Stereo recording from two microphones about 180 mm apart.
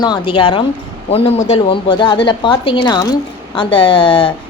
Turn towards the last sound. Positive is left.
turn(degrees=30)  # may be behind; listen again after turning